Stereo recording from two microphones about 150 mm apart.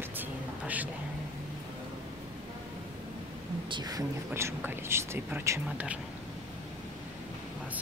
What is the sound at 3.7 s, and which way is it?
Speech, 25° right (ahead or behind).